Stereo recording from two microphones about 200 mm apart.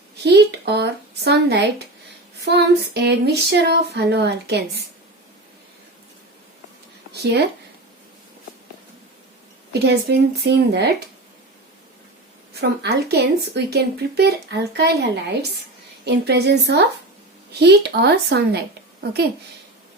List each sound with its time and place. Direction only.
0.2 s speech: 55° right (ahead or behind)
7.1 s speech: 55° right (ahead or behind)
9.7 s speech: 55° right (ahead or behind)
12.5 s speech: 55° right (ahead or behind)
16.0 s speech: 55° right (ahead or behind)